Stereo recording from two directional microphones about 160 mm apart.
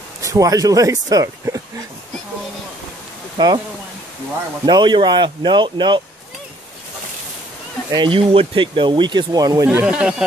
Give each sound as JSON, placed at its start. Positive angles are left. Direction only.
{"t": 0.2, "sound": "speech", "side_deg": -20}
{"t": 3.3, "sound": "speech", "side_deg": -25}
{"t": 4.6, "sound": "speech", "side_deg": -30}
{"t": 7.9, "sound": "speech", "side_deg": -30}
{"t": 9.7, "sound": "speech", "side_deg": -10}